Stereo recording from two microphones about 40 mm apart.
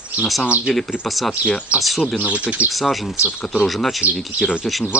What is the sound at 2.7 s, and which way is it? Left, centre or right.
Speech, centre.